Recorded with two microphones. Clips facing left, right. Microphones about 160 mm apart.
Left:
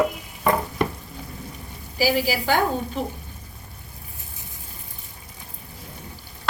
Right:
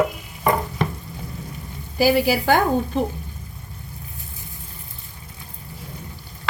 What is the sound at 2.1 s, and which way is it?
Speech, 50° right (ahead or behind).